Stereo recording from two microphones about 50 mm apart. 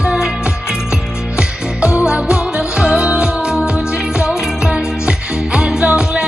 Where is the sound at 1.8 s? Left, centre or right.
Right.